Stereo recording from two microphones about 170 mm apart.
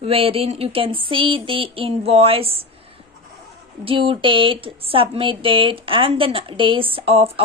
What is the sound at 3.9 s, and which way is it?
A woman's voice, 30° right (ahead or behind).